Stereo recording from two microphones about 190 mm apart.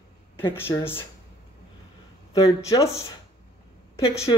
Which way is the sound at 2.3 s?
15° left (ahead or behind).